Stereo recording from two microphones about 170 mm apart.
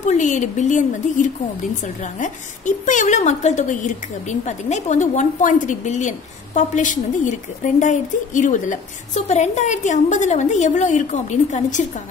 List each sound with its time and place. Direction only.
0.0 s a woman's voice: 45° left (ahead or behind)